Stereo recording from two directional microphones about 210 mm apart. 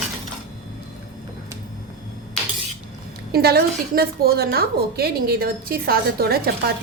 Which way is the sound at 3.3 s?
50° right (ahead or behind).